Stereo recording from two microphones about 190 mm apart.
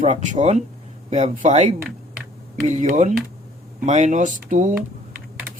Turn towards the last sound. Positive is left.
turn(degrees=-40)  # may be behind; listen again after turning